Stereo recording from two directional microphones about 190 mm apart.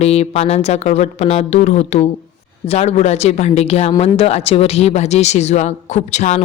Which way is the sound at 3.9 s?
20° left (ahead or behind).